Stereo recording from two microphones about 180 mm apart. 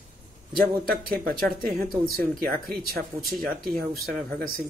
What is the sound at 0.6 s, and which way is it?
Speech, 55° right (ahead or behind).